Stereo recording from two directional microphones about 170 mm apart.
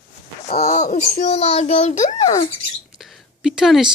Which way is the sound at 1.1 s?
40° left (ahead or behind).